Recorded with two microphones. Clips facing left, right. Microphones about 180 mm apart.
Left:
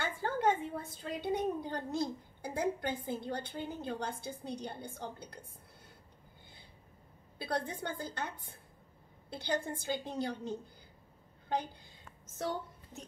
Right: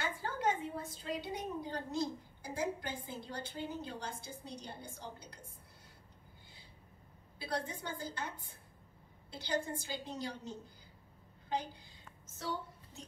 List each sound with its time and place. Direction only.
0.0 s a woman's voice: 55° left (ahead or behind)
7.3 s a woman's voice: 55° left (ahead or behind)
9.3 s a woman's voice: 60° left (ahead or behind)
12.4 s a woman's voice: 55° left (ahead or behind)